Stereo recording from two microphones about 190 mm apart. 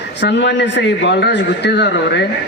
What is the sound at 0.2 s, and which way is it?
A man's voice, 65° left (ahead or behind).